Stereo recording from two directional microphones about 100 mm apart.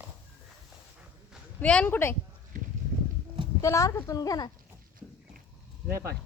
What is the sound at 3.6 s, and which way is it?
Speech, 30° left (ahead or behind).